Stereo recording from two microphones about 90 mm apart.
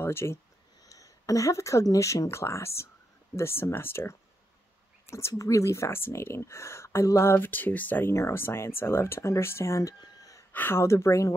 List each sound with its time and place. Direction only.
0.0 s speech: 25° left (ahead or behind)
0.8 s speech: 40° left (ahead or behind)
10.5 s speech: 25° left (ahead or behind)